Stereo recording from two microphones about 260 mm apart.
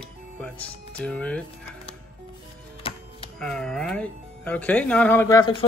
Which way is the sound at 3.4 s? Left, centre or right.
Centre.